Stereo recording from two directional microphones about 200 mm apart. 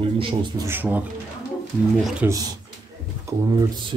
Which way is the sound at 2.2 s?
10° right (ahead or behind).